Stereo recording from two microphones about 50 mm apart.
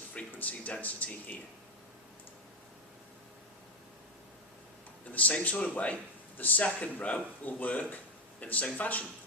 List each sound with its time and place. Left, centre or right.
0.3 s speech: left
5.1 s speech: left